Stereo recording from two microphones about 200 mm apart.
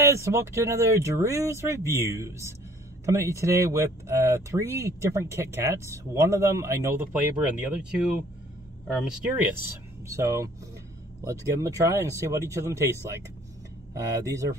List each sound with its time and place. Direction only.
0.0 s speech: 15° right (ahead or behind)